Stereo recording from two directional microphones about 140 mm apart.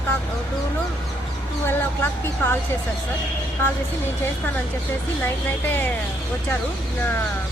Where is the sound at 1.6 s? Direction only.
15° left (ahead or behind).